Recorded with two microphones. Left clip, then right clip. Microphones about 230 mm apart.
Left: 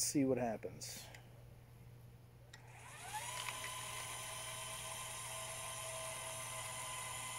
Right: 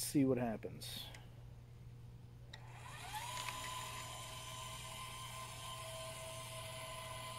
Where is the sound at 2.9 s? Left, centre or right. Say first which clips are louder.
Even; centre.